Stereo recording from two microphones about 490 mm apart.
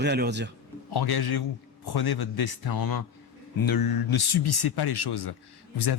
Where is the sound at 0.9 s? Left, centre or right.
Left.